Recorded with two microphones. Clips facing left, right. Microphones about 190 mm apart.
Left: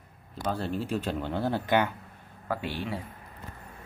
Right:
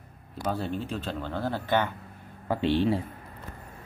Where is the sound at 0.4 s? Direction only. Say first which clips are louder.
Even; 5° right (ahead or behind); by 1.9 s 15° left (ahead or behind).